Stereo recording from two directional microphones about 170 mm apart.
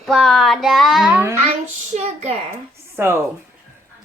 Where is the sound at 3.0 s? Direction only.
10° right (ahead or behind).